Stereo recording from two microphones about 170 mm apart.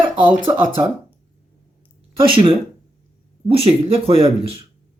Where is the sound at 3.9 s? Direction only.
35° right (ahead or behind).